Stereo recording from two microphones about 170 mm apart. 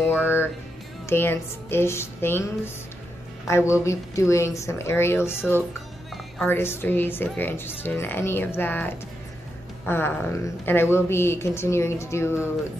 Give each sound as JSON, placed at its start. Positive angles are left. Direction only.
{"t": 0.1, "sound": "music", "side_deg": 10}
{"t": 1.0, "sound": "speech", "side_deg": 15}
{"t": 6.3, "sound": "speech", "side_deg": 10}